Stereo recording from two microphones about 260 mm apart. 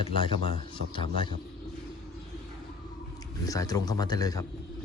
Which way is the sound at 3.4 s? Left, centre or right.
Centre.